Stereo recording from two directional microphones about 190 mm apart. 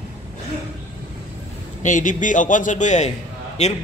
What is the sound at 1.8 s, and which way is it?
A man's voice, 45° left (ahead or behind).